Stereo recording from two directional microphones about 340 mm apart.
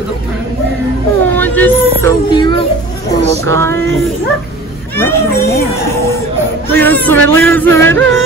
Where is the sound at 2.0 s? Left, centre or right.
Centre.